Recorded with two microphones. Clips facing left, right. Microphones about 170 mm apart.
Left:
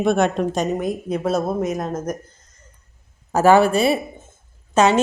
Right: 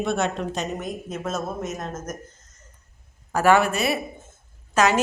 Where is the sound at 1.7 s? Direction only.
35° left (ahead or behind).